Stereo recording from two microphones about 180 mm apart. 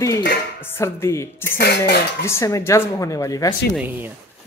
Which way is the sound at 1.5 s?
65° left (ahead or behind).